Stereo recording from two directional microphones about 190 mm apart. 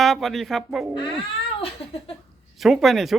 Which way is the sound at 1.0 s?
25° left (ahead or behind).